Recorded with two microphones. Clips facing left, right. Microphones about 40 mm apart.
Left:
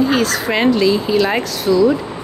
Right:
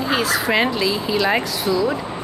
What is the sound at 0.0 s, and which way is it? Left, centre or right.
Speech, centre.